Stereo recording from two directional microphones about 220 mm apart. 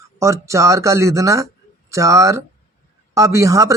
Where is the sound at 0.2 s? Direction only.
15° right (ahead or behind).